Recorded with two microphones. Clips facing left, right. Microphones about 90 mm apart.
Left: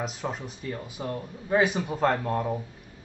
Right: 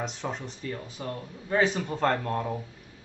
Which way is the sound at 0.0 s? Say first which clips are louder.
Left 1 dB; 5° left (ahead or behind).